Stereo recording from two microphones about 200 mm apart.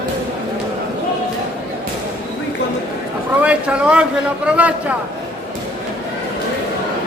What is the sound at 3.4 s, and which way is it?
A man's voice, 5° right (ahead or behind).